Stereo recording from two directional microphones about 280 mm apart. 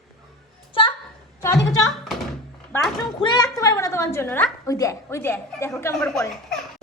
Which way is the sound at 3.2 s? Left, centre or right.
Centre.